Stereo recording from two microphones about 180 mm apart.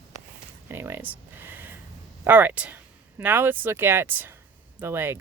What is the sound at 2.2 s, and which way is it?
Speech, 10° right (ahead or behind).